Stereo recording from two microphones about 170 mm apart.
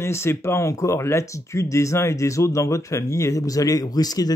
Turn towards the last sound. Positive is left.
turn(degrees=20)  # may be behind; listen again after turning